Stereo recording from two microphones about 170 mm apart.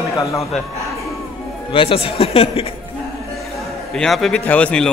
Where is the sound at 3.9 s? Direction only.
5° left (ahead or behind).